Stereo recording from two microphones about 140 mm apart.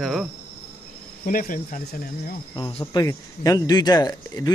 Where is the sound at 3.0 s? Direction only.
25° left (ahead or behind).